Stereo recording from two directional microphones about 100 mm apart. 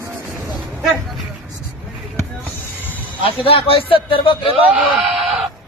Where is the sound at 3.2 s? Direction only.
70° left (ahead or behind).